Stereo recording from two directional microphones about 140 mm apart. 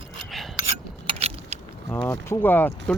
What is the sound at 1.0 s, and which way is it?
Keys jangling, 45° right (ahead or behind).